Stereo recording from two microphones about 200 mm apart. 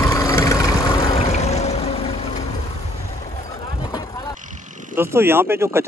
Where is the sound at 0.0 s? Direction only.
15° left (ahead or behind).